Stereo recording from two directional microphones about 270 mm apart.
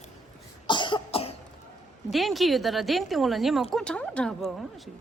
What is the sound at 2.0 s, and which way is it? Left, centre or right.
Speech, centre.